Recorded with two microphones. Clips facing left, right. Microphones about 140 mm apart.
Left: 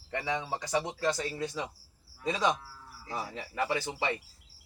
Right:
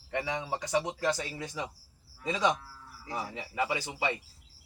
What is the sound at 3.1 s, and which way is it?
Speech, 10° right (ahead or behind).